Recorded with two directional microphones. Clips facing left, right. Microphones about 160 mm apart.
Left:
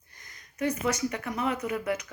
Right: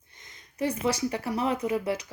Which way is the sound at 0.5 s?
30° right (ahead or behind).